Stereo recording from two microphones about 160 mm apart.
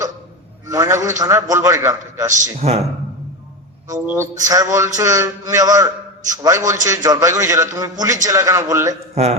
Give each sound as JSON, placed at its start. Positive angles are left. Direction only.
{"t": 0.7, "sound": "a man's voice", "side_deg": -20}
{"t": 2.3, "sound": "a man's voice", "side_deg": -40}
{"t": 4.0, "sound": "a man's voice", "side_deg": -10}
{"t": 9.1, "sound": "speech", "side_deg": -40}